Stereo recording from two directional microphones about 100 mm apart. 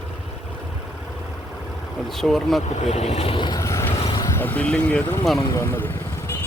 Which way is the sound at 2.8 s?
90° left.